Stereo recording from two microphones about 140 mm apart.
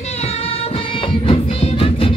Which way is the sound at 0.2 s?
45° left (ahead or behind).